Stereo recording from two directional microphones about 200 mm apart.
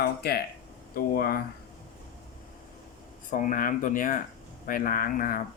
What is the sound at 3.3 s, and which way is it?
Speech, 40° left (ahead or behind).